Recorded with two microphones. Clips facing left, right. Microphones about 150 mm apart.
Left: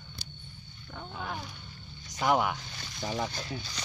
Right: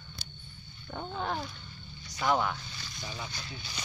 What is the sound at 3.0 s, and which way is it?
Speech, 90° left.